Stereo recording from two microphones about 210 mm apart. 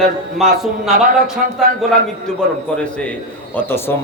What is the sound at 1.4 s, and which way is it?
Speech, 45° right (ahead or behind).